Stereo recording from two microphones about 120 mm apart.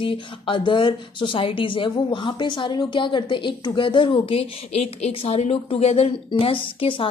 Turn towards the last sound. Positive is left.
turn(degrees=45)  # may be behind; listen again after turning